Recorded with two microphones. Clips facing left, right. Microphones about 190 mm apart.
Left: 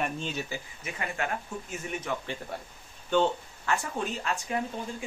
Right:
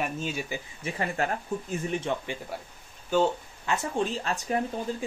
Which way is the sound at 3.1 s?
5° right (ahead or behind).